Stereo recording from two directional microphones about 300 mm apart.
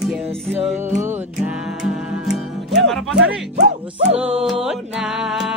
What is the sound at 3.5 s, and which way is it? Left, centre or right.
Music, right.